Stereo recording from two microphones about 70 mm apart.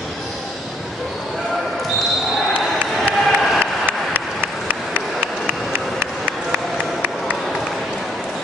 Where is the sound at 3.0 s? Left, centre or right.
Centre.